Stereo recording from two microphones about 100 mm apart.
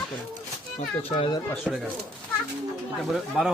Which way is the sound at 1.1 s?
60° left (ahead or behind).